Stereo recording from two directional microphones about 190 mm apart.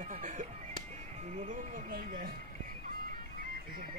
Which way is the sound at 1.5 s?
45° right (ahead or behind).